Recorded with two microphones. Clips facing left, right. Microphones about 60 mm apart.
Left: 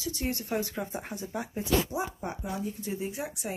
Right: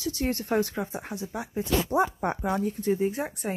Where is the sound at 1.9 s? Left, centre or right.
Right.